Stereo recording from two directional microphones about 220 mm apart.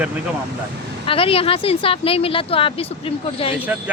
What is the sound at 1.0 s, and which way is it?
Speech, 25° left (ahead or behind).